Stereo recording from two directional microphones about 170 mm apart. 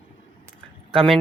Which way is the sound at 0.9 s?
Centre (ahead or behind).